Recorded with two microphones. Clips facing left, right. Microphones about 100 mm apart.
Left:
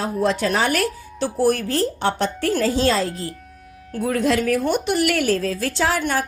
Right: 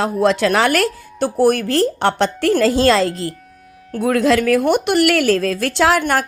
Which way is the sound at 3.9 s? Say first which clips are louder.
Right 5 dB; 65° right (ahead or behind).